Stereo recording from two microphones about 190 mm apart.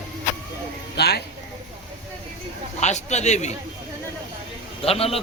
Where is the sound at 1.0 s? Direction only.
60° left (ahead or behind).